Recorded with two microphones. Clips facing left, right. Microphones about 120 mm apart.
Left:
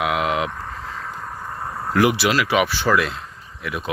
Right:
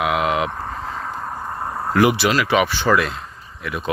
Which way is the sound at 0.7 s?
40° right (ahead or behind).